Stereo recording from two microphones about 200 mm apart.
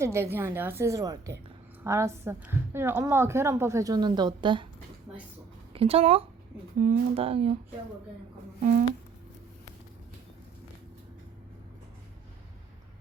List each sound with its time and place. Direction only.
0.0 s a woman's voice: 10° right (ahead or behind)
5.7 s speech: 30° right (ahead or behind)
6.7 s a woman's voice: 40° right (ahead or behind)
7.1 s speech: 30° right (ahead or behind)